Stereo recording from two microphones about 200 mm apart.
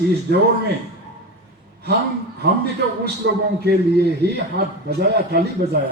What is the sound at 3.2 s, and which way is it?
A man's voice, 55° right (ahead or behind).